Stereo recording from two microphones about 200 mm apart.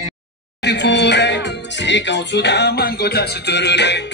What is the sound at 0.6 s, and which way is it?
Music, 60° left (ahead or behind).